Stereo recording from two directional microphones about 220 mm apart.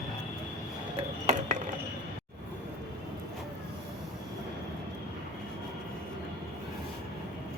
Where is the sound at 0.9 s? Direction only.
35° right (ahead or behind).